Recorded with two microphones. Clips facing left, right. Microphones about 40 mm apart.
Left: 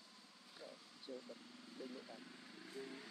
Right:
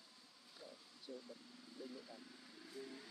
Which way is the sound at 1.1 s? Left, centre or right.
Left.